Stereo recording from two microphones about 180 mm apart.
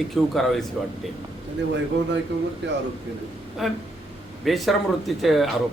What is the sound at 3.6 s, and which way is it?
Speech, centre (ahead or behind).